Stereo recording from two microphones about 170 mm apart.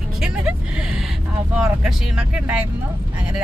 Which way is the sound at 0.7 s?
5° right (ahead or behind).